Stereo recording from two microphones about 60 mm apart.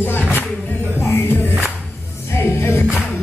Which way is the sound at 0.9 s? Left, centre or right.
Left.